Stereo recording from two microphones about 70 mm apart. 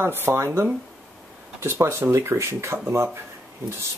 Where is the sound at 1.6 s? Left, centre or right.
Right.